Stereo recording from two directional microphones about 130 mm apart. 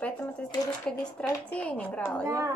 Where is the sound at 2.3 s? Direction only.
20° right (ahead or behind).